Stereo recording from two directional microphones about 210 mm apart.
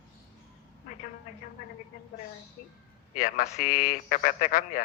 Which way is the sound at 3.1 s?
40° left (ahead or behind).